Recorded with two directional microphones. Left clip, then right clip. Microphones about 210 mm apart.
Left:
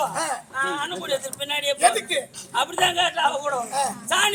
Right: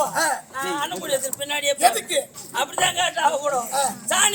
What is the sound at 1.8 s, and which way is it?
Speech, 5° left (ahead or behind).